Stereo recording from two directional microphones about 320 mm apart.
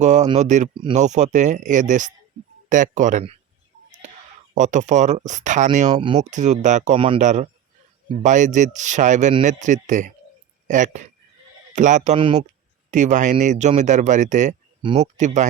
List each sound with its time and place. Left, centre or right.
0.0 s speech: right
4.5 s speech: right